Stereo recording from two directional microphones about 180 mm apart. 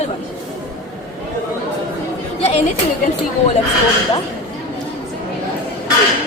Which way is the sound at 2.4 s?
35° left (ahead or behind).